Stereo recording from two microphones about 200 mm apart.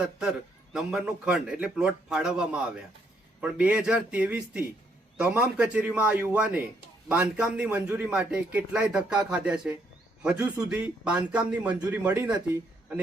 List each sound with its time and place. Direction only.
0.0 s a man's voice: 5° right (ahead or behind)